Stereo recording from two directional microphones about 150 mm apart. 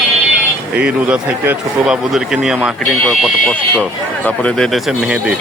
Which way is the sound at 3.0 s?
10° left (ahead or behind).